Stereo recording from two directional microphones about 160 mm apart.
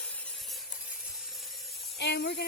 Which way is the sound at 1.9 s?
90° left.